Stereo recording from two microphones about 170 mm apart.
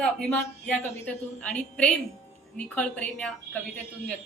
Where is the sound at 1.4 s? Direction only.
5° left (ahead or behind).